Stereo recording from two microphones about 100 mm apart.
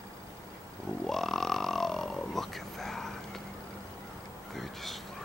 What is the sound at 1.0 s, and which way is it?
Grunt, 5° left (ahead or behind).